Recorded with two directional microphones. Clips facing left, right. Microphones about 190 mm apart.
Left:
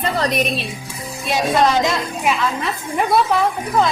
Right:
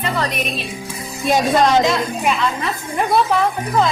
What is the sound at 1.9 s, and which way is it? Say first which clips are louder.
Speech: right 2 dB; 5° left (ahead or behind).